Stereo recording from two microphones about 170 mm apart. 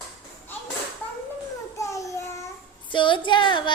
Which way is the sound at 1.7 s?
20° left (ahead or behind).